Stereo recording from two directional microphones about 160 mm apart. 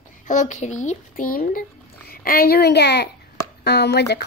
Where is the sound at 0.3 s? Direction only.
50° left (ahead or behind).